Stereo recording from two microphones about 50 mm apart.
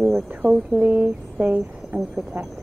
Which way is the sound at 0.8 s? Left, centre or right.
Right.